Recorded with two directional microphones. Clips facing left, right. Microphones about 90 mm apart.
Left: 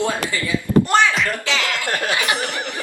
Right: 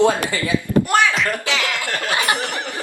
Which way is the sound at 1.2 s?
15° right (ahead or behind).